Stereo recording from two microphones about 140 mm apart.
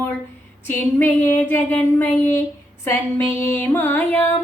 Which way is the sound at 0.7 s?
15° left (ahead or behind).